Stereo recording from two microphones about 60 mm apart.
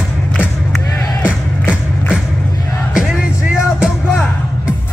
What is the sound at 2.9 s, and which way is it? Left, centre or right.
Music, centre.